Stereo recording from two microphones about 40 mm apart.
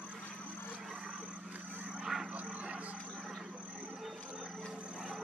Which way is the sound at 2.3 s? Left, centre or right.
Right.